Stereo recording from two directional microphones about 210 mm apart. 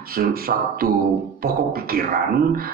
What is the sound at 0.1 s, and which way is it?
A man's voice, 45° right (ahead or behind).